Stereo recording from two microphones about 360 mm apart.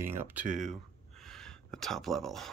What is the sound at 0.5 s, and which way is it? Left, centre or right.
Speech, right.